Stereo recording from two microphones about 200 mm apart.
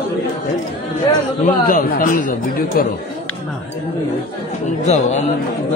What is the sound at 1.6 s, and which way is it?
Speech, 45° left (ahead or behind).